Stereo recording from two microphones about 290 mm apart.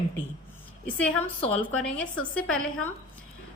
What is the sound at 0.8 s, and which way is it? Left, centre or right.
Speech, centre.